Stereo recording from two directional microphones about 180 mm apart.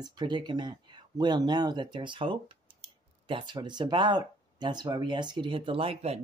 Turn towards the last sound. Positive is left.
turn(degrees=-35)  # may be behind; listen again after turning